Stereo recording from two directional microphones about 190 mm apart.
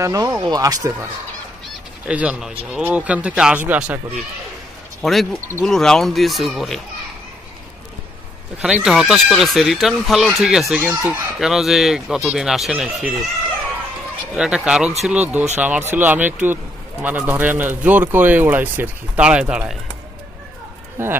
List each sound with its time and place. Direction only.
0.0 s speech: 15° right (ahead or behind)
2.0 s speech: 5° right (ahead or behind)
5.0 s speech: centre (ahead or behind)
8.5 s speech: 5° right (ahead or behind)
14.3 s speech: 5° right (ahead or behind)
21.0 s speech: 10° right (ahead or behind)